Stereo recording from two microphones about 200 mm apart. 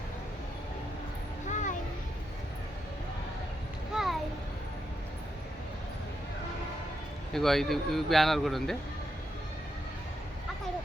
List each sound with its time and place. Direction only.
1.5 s vehicle: 40° left (ahead or behind)
3.9 s a sound: centre (ahead or behind)
7.3 s speech: centre (ahead or behind)